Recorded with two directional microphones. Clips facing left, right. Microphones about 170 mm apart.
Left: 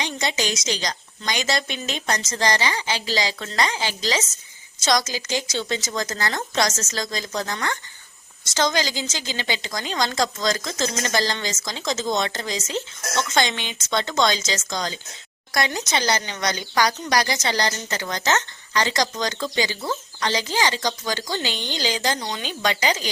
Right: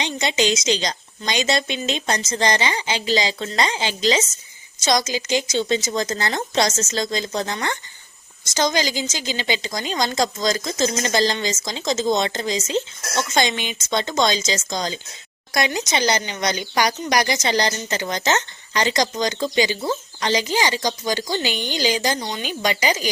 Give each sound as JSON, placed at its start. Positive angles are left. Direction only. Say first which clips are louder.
{"t": 0.0, "sound": "a woman's voice", "louder": "right 4 dB", "side_deg": -20}